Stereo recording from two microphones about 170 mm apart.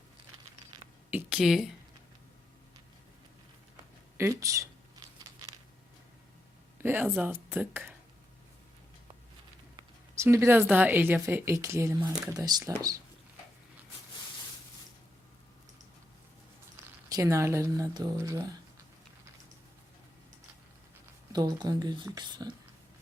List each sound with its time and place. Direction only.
1.1 s a sound: 5° right (ahead or behind)
4.2 s a sound: 15° right (ahead or behind)
6.7 s speech: 15° right (ahead or behind)
9.7 s speech: 15° right (ahead or behind)
17.1 s speech: 20° right (ahead or behind)
21.3 s speech: 20° right (ahead or behind)